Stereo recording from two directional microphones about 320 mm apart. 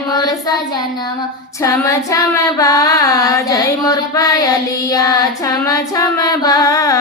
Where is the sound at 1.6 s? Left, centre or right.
Centre.